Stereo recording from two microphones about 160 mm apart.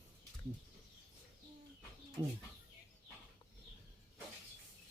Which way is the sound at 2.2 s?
25° right (ahead or behind).